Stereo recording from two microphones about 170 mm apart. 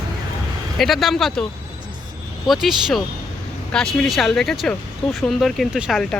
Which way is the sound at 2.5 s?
Centre (ahead or behind).